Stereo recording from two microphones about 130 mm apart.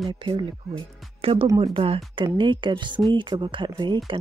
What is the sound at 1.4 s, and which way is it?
Speech, 30° right (ahead or behind).